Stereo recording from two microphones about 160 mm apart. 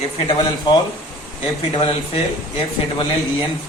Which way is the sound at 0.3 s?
30° left (ahead or behind).